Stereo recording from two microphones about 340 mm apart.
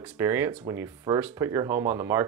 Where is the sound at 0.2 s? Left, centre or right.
Centre.